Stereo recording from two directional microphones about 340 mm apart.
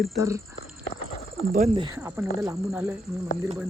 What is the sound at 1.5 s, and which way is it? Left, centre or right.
Speech, right.